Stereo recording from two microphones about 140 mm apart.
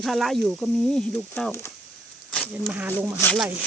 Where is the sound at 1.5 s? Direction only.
20° left (ahead or behind).